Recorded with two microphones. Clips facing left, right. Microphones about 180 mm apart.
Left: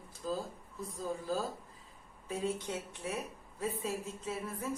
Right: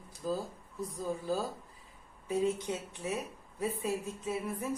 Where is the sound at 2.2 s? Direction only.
15° right (ahead or behind).